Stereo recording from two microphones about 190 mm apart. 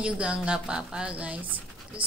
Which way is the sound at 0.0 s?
5° right (ahead or behind).